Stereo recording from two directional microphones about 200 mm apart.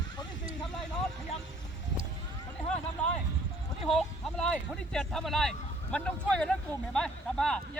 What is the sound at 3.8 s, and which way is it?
Speech, centre (ahead or behind).